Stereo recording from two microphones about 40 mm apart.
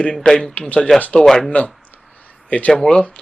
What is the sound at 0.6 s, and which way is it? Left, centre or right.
Speech, left.